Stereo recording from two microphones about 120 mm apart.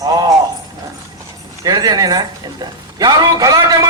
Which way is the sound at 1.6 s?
35° right (ahead or behind).